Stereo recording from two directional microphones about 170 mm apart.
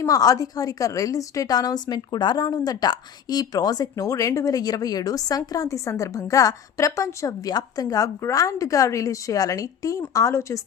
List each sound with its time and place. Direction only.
0.0 s a woman's voice: 20° left (ahead or behind)